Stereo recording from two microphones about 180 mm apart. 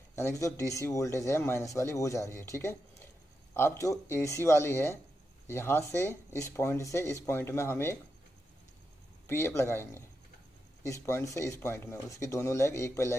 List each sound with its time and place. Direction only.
0.2 s speech: 15° left (ahead or behind)
9.3 s speech: 15° left (ahead or behind)